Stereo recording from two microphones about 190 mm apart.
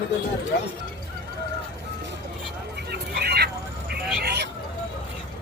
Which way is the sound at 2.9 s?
60° right (ahead or behind).